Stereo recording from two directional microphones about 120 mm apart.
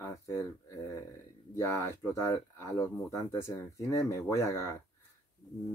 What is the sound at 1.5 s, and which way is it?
Speech, 20° left (ahead or behind).